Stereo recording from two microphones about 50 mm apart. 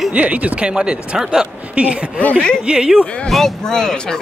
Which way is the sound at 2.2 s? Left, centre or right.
Left.